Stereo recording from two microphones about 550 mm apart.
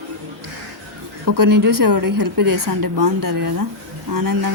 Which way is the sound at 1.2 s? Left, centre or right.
Right.